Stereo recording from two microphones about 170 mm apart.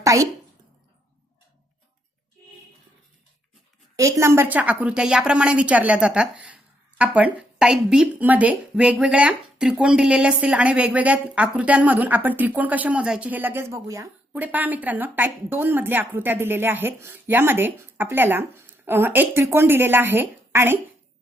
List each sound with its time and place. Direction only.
0.0 s a woman's voice: 20° right (ahead or behind)
3.9 s speech: 20° right (ahead or behind)